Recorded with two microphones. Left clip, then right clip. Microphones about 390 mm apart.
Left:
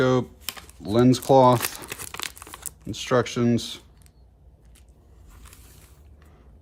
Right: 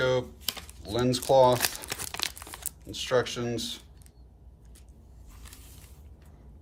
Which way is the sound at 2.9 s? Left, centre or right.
Centre.